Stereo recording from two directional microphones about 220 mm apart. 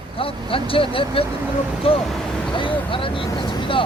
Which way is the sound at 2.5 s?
25° left (ahead or behind).